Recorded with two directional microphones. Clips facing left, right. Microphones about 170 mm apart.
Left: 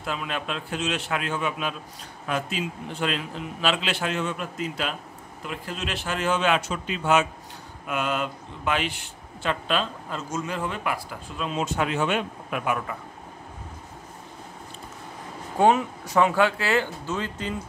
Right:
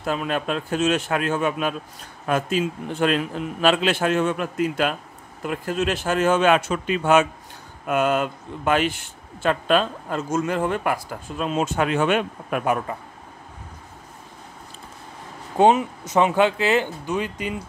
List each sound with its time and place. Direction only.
0.0 s speech: 45° right (ahead or behind)
15.5 s speech: 20° right (ahead or behind)